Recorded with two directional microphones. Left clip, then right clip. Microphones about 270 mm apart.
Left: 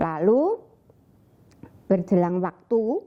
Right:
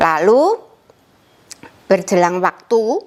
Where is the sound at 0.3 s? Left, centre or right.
Centre.